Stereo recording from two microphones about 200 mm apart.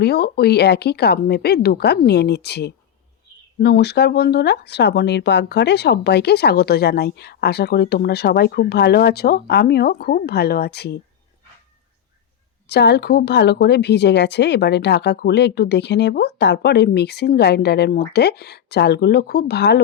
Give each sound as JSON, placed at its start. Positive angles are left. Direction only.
{"t": 0.0, "sound": "speech", "side_deg": 55}
{"t": 12.6, "sound": "speech", "side_deg": 55}